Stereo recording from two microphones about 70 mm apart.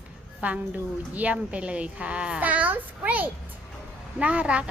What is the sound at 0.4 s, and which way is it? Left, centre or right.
Speech, right.